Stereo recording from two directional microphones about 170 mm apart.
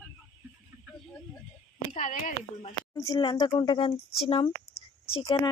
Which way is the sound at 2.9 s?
25° left (ahead or behind).